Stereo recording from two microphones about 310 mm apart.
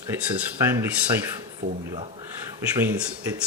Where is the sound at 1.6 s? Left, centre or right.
Right.